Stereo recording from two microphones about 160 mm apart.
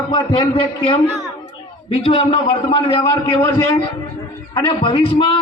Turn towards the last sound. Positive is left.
turn(degrees=30)  # may be behind; listen again after turning